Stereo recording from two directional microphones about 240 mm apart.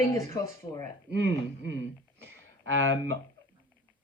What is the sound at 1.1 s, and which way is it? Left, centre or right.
Speech, right.